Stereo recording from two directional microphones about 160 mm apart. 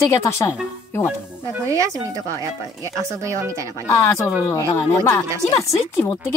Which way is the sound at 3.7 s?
20° left (ahead or behind).